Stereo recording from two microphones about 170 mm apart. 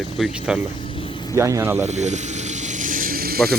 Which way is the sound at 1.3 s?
15° right (ahead or behind).